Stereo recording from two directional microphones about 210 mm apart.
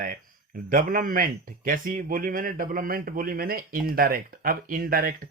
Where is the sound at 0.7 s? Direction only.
40° right (ahead or behind).